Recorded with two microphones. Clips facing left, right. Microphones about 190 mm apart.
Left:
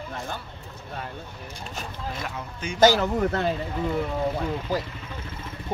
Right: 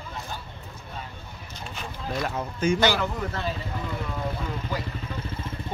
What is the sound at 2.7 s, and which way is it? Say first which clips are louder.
Speech: left 10 dB; 50° left (ahead or behind).